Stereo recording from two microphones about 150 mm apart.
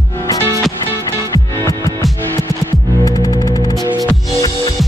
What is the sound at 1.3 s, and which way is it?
Music, 20° left (ahead or behind).